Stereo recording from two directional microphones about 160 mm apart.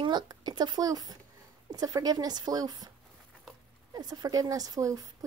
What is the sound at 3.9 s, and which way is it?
Speech, 25° right (ahead or behind).